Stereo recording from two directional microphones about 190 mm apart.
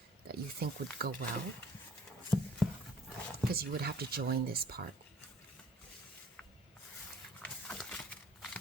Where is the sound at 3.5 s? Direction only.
55° right (ahead or behind).